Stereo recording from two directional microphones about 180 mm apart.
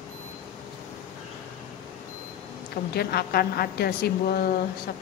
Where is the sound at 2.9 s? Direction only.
60° left (ahead or behind).